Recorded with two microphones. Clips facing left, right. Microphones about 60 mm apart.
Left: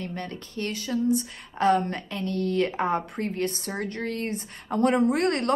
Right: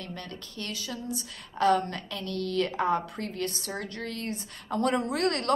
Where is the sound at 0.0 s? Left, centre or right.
Left.